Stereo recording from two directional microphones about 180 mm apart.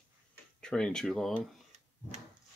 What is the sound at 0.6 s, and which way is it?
Speech, 5° left (ahead or behind).